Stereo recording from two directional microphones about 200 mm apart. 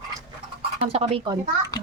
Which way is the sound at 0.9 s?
30° right (ahead or behind).